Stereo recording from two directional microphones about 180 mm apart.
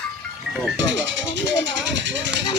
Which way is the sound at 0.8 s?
90° right.